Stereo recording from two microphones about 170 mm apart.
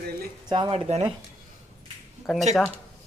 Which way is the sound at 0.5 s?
25° right (ahead or behind).